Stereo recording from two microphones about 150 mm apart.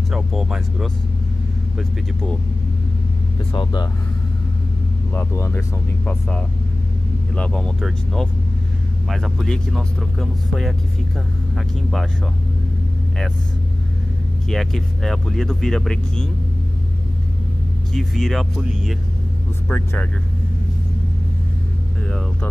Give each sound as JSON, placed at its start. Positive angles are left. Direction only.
{"t": 0.1, "sound": "speech", "side_deg": -5}
{"t": 3.5, "sound": "speech", "side_deg": 30}
{"t": 5.1, "sound": "speech", "side_deg": 15}
{"t": 7.3, "sound": "speech", "side_deg": 5}
{"t": 14.5, "sound": "speech", "side_deg": 0}
{"t": 17.9, "sound": "speech", "side_deg": 0}
{"t": 19.7, "sound": "speech", "side_deg": 15}
{"t": 22.0, "sound": "speech", "side_deg": 5}